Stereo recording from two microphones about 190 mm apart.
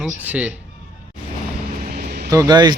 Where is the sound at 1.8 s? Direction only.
55° right (ahead or behind).